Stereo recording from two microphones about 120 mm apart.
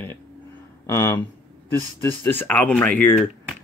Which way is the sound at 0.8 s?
20° left (ahead or behind).